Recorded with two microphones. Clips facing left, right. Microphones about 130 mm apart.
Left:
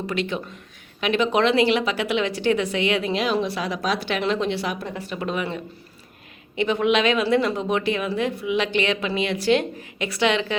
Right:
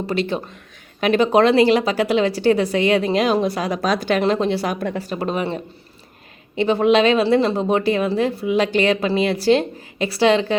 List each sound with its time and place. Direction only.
0.1 s speech: 35° right (ahead or behind)